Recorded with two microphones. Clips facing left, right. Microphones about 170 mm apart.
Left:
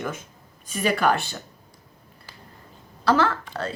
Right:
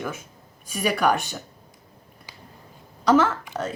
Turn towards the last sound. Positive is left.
turn(degrees=-15)  # may be behind; listen again after turning